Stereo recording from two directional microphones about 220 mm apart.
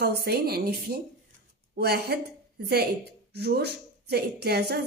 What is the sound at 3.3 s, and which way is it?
A woman's voice, 45° right (ahead or behind).